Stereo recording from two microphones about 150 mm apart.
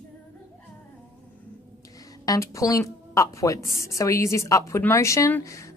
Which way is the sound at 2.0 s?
25° left (ahead or behind).